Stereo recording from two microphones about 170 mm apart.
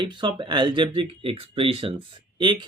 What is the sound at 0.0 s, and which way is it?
Speech, 30° right (ahead or behind).